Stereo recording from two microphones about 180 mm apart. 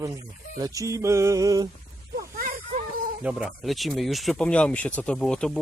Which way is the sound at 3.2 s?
5° right (ahead or behind).